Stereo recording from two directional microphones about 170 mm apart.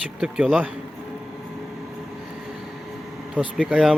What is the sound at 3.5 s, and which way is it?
Speech, 5° right (ahead or behind).